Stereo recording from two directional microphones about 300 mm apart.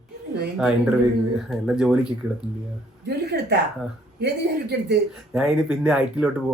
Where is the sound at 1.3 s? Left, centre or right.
Centre.